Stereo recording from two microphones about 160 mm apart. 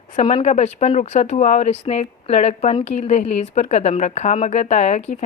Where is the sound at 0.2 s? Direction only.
40° left (ahead or behind).